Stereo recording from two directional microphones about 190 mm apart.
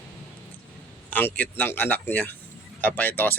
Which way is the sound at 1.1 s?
10° left (ahead or behind).